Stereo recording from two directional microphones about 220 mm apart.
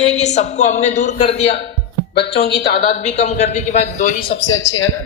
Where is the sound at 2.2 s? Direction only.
45° left (ahead or behind).